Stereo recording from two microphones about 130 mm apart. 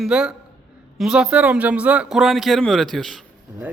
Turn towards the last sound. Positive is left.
turn(degrees=0)  # may be behind; listen again after turning